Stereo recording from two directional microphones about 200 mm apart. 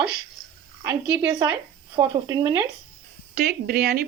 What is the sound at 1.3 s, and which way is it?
Speech, 20° right (ahead or behind).